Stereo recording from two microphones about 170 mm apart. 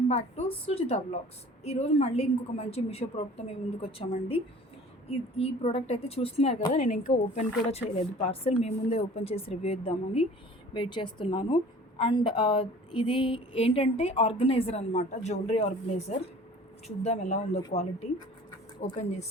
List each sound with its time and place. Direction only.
0.1 s a woman's voice: 35° left (ahead or behind)
18.8 s a woman's voice: 40° left (ahead or behind)